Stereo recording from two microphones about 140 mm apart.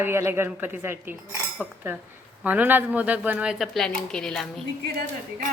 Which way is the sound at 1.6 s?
5° right (ahead or behind).